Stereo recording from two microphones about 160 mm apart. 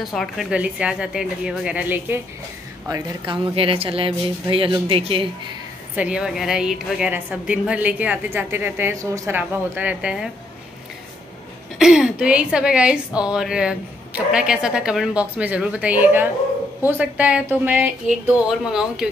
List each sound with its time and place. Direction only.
0.0 s speech: centre (ahead or behind)
2.9 s speech: 30° right (ahead or behind)
5.9 s a woman's voice: 5° right (ahead or behind)
9.4 s a woman's voice: 10° right (ahead or behind)
11.8 s a woman's voice: 5° right (ahead or behind)